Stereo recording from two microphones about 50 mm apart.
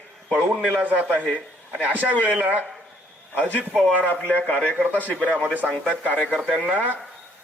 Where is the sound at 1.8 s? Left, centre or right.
Right.